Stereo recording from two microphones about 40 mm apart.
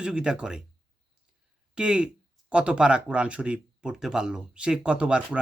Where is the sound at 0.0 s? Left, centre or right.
Centre.